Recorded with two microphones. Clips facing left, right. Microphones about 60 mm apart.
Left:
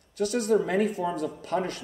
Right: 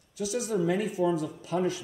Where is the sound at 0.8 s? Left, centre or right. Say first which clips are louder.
Right 1 dB; centre.